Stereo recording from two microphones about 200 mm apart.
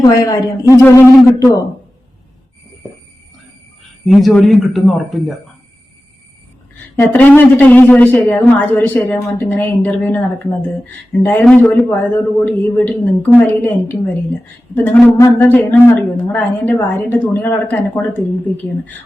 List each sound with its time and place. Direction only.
0.0 s a woman's voice: 15° left (ahead or behind)
4.0 s speech: centre (ahead or behind)
7.1 s a woman's voice: 10° left (ahead or behind)
15.2 s a woman's voice: 10° left (ahead or behind)